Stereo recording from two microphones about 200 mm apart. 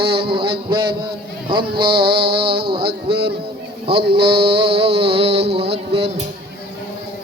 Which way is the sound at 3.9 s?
30° right (ahead or behind).